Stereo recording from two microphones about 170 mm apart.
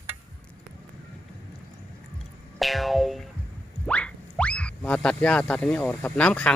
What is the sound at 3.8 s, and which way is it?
Speech, 5° left (ahead or behind).